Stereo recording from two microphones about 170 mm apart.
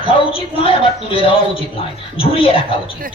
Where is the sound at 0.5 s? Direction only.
30° left (ahead or behind).